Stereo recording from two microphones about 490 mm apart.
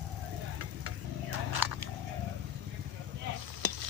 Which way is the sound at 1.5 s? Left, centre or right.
Right.